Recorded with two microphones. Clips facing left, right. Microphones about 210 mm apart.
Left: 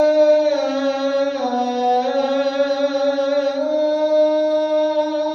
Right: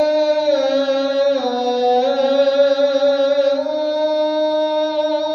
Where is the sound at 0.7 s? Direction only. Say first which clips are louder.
Right 2 dB; 40° right (ahead or behind).